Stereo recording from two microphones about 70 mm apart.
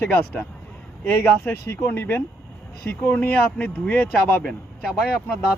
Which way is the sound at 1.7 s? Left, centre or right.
Left.